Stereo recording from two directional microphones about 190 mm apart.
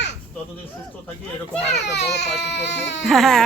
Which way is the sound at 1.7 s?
65° left (ahead or behind).